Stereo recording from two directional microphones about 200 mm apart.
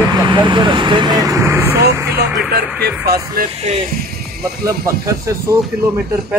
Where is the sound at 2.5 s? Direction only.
55° right (ahead or behind).